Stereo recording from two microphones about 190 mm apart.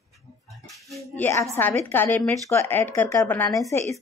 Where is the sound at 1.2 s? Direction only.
15° left (ahead or behind).